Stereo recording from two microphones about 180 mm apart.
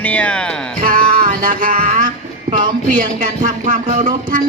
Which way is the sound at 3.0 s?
45° right (ahead or behind).